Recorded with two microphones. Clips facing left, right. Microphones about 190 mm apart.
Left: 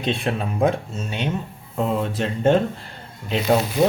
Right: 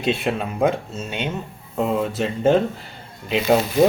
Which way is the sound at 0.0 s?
5° right (ahead or behind).